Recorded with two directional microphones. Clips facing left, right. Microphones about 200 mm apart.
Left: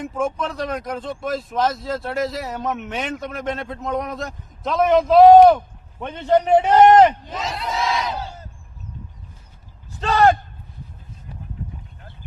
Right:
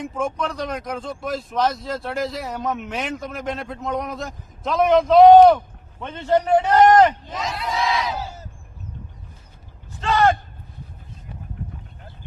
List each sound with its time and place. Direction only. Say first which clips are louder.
0.0 s a man's voice: left 1 dB; centre (ahead or behind); by 7.1 s 25° left (ahead or behind)
7.3 s speech: even; centre (ahead or behind)
10.0 s speech: left 2 dB; 35° left (ahead or behind)